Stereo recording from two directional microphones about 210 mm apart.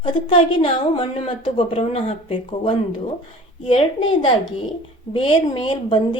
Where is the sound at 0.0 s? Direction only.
25° left (ahead or behind).